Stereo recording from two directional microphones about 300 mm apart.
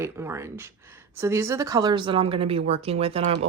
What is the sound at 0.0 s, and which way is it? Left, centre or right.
Speech, centre.